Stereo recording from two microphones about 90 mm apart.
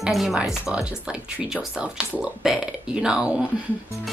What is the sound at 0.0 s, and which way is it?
Speech, 5° right (ahead or behind).